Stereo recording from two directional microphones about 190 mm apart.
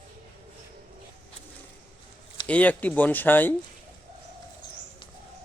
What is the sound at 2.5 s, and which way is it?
Speech, 10° left (ahead or behind).